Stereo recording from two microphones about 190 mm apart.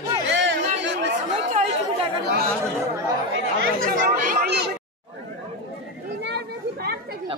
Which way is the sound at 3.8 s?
50° right (ahead or behind).